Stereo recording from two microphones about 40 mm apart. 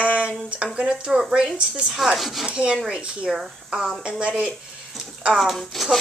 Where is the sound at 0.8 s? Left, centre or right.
Right.